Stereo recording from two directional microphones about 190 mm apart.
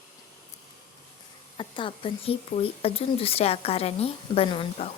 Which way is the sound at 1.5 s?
25° left (ahead or behind).